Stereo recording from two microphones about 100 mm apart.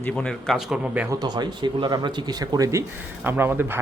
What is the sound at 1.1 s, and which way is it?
Speech, 45° right (ahead or behind).